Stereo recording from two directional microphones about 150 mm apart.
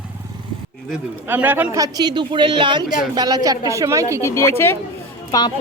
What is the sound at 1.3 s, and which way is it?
Speech, 10° right (ahead or behind).